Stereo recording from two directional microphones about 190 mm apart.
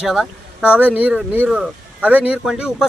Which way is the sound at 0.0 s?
5° right (ahead or behind).